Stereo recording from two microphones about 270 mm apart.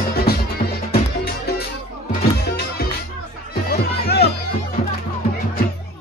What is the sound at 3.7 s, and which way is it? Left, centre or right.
Music, left.